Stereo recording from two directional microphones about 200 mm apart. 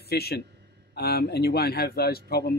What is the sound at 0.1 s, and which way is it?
Speech, 50° left (ahead or behind).